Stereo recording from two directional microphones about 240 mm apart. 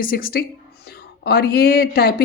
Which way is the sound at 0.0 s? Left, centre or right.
Left.